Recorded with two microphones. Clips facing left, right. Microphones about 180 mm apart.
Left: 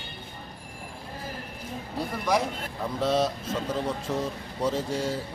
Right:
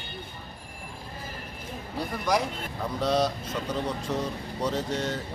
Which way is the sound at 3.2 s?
25° left (ahead or behind).